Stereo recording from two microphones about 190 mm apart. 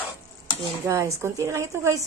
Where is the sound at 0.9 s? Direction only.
15° right (ahead or behind).